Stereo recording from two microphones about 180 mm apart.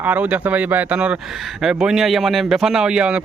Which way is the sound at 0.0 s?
10° right (ahead or behind).